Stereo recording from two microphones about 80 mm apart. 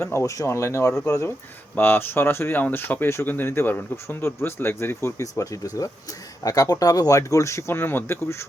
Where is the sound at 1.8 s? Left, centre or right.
Left.